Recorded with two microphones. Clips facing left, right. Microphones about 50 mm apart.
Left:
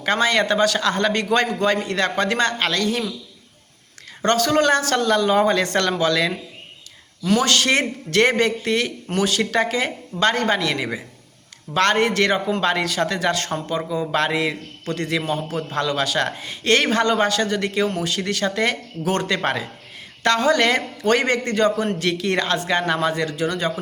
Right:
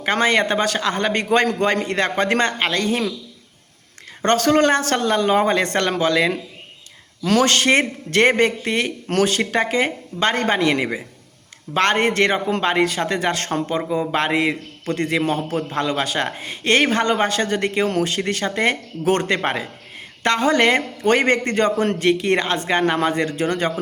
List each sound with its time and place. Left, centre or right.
0.0 s speech: right
4.2 s speech: right